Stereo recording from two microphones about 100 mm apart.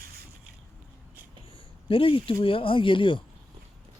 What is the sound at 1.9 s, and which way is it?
Speech, 60° left (ahead or behind).